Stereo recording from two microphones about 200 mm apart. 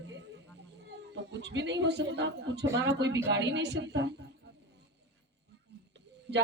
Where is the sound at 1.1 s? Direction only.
60° right (ahead or behind).